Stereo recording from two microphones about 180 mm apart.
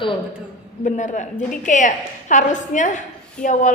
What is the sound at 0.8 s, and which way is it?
A woman's voice, 40° left (ahead or behind).